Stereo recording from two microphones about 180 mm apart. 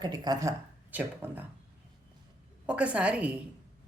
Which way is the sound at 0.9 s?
10° right (ahead or behind).